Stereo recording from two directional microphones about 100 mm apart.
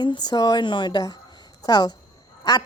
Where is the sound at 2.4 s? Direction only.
40° left (ahead or behind).